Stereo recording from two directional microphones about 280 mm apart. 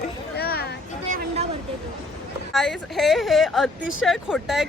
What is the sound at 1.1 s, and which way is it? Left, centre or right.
Vehicle, right.